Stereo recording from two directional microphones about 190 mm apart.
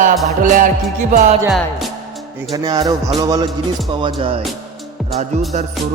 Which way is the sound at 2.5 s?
20° right (ahead or behind).